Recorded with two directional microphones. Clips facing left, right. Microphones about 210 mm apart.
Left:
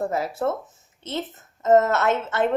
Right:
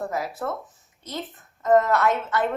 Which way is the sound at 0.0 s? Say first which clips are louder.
Left 4 dB; 25° left (ahead or behind).